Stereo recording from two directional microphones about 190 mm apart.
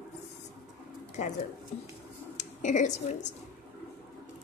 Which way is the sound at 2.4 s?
40° left (ahead or behind).